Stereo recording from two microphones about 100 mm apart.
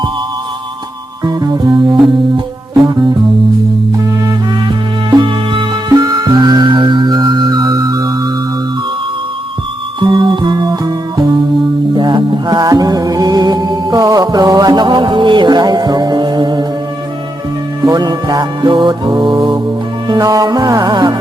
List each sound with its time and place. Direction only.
1.2 s music: 40° right (ahead or behind)
5.1 s music: 55° right (ahead or behind)
5.9 s music: 40° right (ahead or behind)
10.0 s music: 50° right (ahead or behind)
17.8 s music: 40° right (ahead or behind)